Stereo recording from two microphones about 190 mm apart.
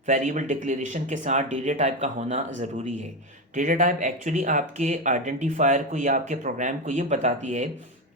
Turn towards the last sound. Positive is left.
turn(degrees=-40)  # may be behind; listen again after turning